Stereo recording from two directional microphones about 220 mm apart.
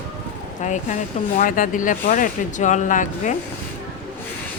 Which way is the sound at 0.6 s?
35° left (ahead or behind).